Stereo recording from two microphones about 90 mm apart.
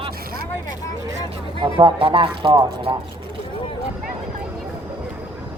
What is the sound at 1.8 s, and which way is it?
Speech, 75° right (ahead or behind).